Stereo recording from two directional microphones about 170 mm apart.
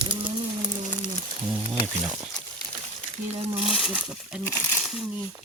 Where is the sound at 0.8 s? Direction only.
45° right (ahead or behind).